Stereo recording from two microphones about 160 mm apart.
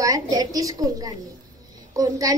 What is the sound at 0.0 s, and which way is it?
A woman's voice, 20° right (ahead or behind).